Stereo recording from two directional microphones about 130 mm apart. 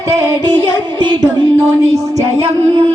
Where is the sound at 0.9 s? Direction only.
35° right (ahead or behind).